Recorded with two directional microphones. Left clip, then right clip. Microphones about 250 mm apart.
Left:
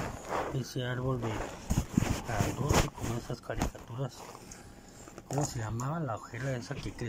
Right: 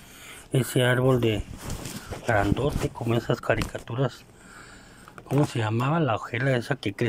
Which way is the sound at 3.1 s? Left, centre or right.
Right.